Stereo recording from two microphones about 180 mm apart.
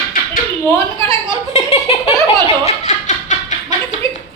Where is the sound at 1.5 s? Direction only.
35° left (ahead or behind).